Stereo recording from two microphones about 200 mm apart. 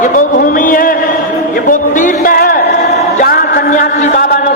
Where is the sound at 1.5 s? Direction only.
45° left (ahead or behind).